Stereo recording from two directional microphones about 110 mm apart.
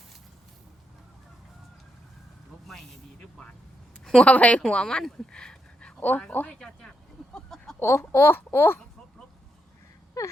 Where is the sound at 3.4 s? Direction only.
10° left (ahead or behind).